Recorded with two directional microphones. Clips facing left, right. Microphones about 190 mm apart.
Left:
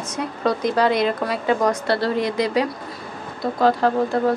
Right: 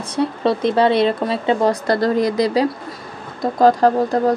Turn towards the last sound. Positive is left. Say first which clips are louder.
# right 4 dB
turn(degrees=-40)  # may be behind; listen again after turning